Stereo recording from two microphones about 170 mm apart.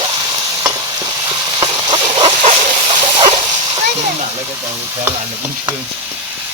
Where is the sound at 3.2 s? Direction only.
25° right (ahead or behind).